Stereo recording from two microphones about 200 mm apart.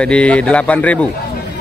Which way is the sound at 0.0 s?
5° left (ahead or behind).